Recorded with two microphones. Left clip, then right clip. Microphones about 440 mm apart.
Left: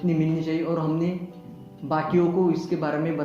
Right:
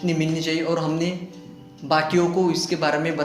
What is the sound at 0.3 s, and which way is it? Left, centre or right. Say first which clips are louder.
A man's voice: right 3 dB; centre.